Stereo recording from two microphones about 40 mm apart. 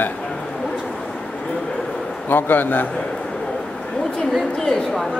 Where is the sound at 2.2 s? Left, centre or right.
Left.